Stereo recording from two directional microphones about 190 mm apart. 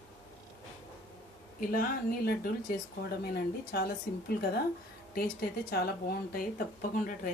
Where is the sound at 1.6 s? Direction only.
50° left (ahead or behind).